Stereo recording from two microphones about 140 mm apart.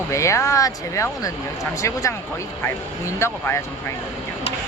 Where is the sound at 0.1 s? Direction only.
20° left (ahead or behind).